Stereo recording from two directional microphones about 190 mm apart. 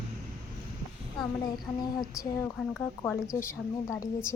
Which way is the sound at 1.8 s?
20° left (ahead or behind).